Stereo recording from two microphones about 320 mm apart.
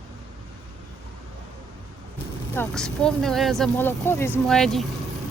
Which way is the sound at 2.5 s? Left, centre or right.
Centre.